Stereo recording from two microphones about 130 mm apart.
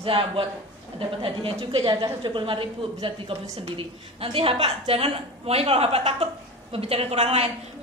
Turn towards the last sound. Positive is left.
turn(degrees=-55)  # may be behind; listen again after turning